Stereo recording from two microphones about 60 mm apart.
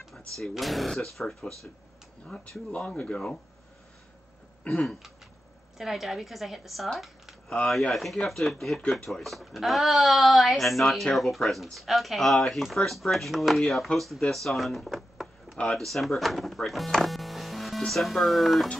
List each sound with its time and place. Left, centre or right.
0.4 s speech: centre
2.2 s speech: centre
4.8 s speech: centre
7.4 s speech: centre
7.7 s speech: centre
15.5 s speech: centre
15.8 s speech: centre